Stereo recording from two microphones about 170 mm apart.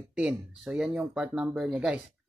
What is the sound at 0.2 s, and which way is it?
Speech, 5° right (ahead or behind).